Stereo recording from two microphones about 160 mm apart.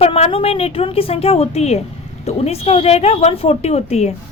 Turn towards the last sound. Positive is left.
turn(degrees=40)  # may be behind; listen again after turning